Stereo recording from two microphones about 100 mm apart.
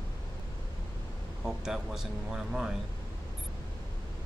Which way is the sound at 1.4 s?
5° right (ahead or behind).